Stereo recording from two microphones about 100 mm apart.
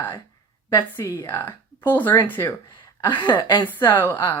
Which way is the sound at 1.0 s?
25° left (ahead or behind).